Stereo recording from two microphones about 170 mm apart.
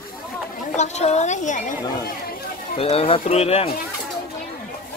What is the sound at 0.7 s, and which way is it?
Speech, 40° left (ahead or behind).